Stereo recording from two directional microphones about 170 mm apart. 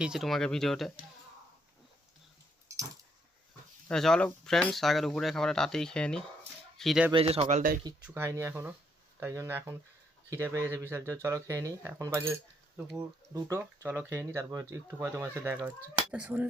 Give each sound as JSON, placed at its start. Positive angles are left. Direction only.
{"t": 0.0, "sound": "speech", "side_deg": 0}
{"t": 2.6, "sound": "a sound", "side_deg": -20}
{"t": 3.8, "sound": "speech", "side_deg": 5}
{"t": 7.1, "sound": "speech", "side_deg": -35}
{"t": 8.0, "sound": "speech", "side_deg": -15}